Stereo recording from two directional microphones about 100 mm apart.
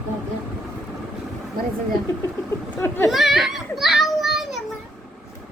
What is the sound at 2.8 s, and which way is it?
Speech, 30° left (ahead or behind).